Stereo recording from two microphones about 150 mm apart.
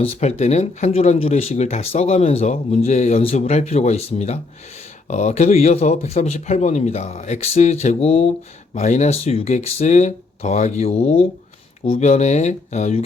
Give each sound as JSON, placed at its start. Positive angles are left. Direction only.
{"t": 0.0, "sound": "speech", "side_deg": 45}